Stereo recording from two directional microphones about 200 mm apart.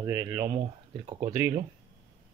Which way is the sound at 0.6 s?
30° right (ahead or behind).